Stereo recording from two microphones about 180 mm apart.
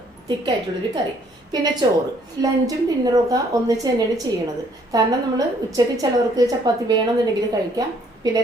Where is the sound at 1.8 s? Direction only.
25° right (ahead or behind).